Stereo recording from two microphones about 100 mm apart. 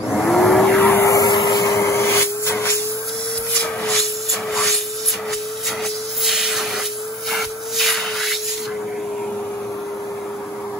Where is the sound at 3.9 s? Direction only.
Centre (ahead or behind).